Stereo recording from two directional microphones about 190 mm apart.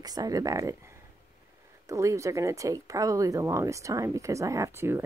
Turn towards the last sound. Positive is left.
turn(degrees=-10)  # may be behind; listen again after turning